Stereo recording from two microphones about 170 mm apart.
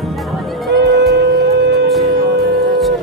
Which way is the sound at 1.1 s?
90° right.